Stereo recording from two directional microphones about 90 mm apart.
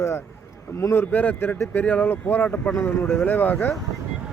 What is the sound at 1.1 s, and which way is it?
Speech, 20° left (ahead or behind).